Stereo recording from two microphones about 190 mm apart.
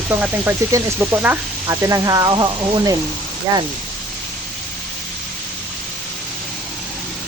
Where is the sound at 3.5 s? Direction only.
20° right (ahead or behind).